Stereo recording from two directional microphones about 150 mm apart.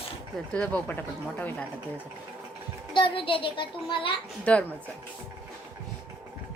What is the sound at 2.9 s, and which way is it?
Speech, 35° left (ahead or behind).